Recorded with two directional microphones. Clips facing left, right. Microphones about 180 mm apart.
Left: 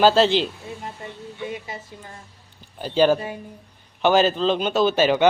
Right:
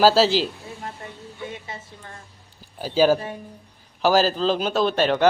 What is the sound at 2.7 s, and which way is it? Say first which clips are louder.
Speech: even; 5° right (ahead or behind).